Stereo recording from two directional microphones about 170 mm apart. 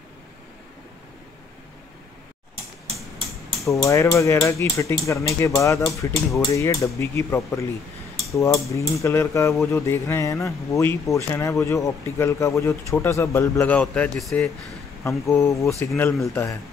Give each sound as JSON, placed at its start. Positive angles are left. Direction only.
{"t": 3.6, "sound": "speech", "side_deg": 20}